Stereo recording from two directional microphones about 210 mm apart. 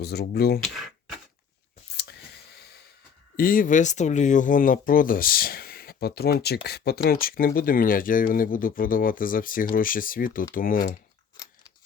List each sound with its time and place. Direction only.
0.0 s speech: 50° left (ahead or behind)
3.3 s speech: 40° left (ahead or behind)